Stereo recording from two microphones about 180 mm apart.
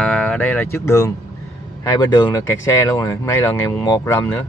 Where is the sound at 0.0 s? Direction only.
5° left (ahead or behind).